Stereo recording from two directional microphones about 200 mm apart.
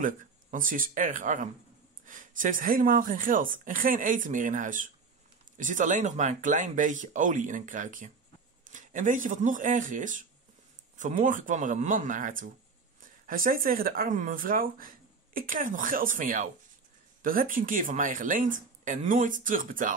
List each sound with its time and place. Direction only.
0.0 s a woman's voice: 40° right (ahead or behind)